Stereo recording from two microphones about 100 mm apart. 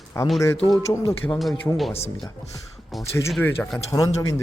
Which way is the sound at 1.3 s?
Centre (ahead or behind).